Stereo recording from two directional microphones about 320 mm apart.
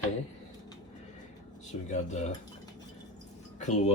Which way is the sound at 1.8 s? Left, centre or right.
Left.